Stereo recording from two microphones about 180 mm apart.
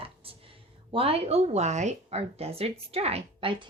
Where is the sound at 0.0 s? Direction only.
30° right (ahead or behind).